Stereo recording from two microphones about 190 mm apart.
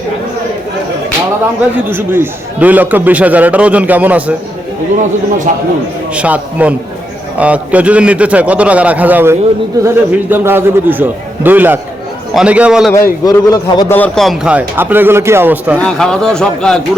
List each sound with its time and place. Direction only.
1.9 s a man's voice: 10° right (ahead or behind)
5.5 s a man's voice: 40° right (ahead or behind)
6.1 s a man's voice: 5° right (ahead or behind)
12.9 s a man's voice: 15° left (ahead or behind); by 15.8 s 10° right (ahead or behind)
15.8 s a man's voice: 5° left (ahead or behind)